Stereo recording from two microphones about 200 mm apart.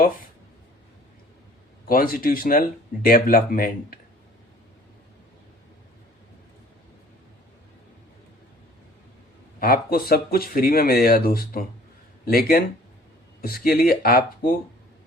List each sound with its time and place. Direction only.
1.9 s speech: 45° left (ahead or behind)
9.6 s speech: 45° left (ahead or behind)